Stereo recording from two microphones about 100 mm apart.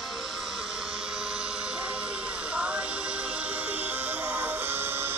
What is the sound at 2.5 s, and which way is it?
Music, 10° right (ahead or behind).